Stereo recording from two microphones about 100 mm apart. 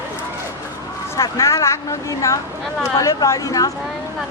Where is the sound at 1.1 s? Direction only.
30° left (ahead or behind).